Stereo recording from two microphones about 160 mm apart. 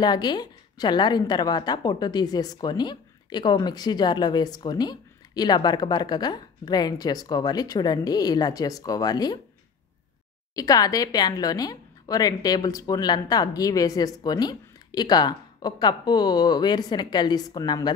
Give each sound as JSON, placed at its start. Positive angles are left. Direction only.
{"t": 0.0, "sound": "a woman's voice", "side_deg": 25}
{"t": 10.5, "sound": "a woman's voice", "side_deg": 20}